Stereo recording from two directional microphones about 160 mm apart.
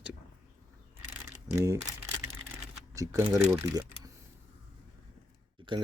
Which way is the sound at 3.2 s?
10° right (ahead or behind).